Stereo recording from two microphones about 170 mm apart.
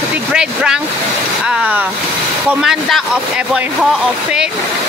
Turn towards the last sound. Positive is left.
turn(degrees=0)  # may be behind; listen again after turning